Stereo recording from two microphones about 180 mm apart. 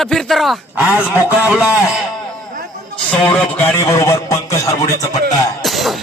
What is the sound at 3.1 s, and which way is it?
A man's voice, 5° left (ahead or behind).